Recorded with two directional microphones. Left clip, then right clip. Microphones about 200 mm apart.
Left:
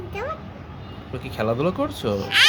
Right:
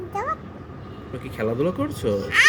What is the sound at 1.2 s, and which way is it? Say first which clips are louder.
Speech: left 1 dB; 30° left (ahead or behind).